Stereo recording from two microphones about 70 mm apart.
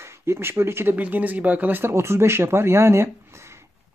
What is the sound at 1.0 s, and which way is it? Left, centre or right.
Speech, right.